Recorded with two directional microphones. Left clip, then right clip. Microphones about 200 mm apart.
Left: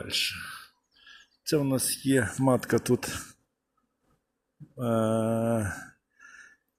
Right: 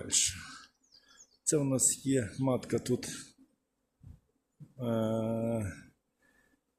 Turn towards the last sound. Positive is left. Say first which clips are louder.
# left 7 dB
turn(degrees=40)  # may be behind; listen again after turning